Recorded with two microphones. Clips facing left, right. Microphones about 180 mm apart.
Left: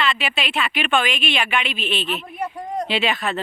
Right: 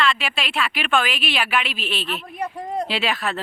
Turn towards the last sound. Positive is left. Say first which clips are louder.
# left 2 dB
turn(degrees=0)  # may be behind; listen again after turning